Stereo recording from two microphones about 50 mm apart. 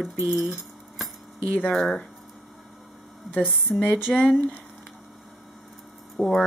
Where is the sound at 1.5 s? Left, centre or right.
Left.